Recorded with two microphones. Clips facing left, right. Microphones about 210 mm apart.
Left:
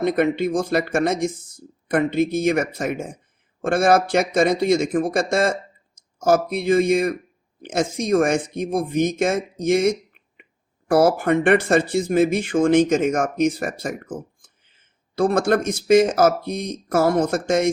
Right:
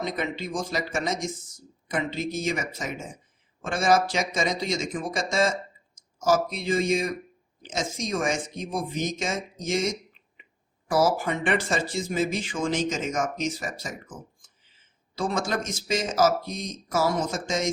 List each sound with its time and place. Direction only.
0.0 s speech: 60° left (ahead or behind)